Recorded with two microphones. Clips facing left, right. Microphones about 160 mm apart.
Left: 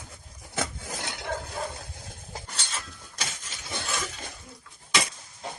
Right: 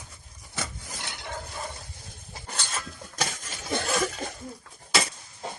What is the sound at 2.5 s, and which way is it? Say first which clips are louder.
Cutlery: right 4 dB; 50° right (ahead or behind).